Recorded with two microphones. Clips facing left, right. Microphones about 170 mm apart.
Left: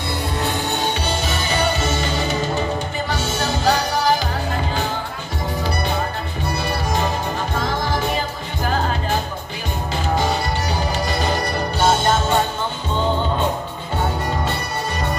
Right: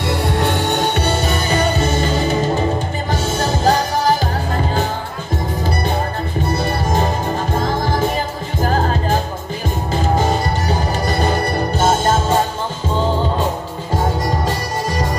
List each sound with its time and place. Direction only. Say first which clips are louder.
0.1 s music: right 5 dB; 75° right (ahead or behind); by 2.0 s 45° right (ahead or behind)
3.1 s music: right 5 dB; 45° right (ahead or behind)
6.4 s music: right 3 dB; 45° right (ahead or behind)
8.6 s music: right 3 dB; 40° right (ahead or behind)